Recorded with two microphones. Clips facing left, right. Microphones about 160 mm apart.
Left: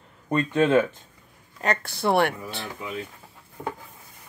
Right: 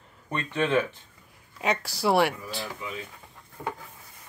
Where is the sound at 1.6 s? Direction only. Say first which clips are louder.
Left 1 dB; centre (ahead or behind).